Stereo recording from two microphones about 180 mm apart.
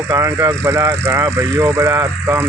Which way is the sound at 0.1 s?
15° right (ahead or behind).